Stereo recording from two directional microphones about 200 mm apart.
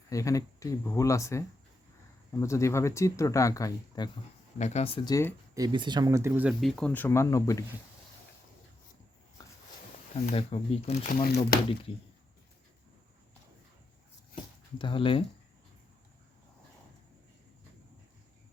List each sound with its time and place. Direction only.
0.1 s speech: 15° left (ahead or behind)
4.5 s speech: 35° left (ahead or behind); by 5.3 s 20° left (ahead or behind)
5.5 s speech: 20° right (ahead or behind); by 7.6 s 15° left (ahead or behind)
9.4 s walk: 15° left (ahead or behind)
10.2 s speech: 30° left (ahead or behind)
11.1 s speech: 50° left (ahead or behind)
14.8 s speech: 25° left (ahead or behind)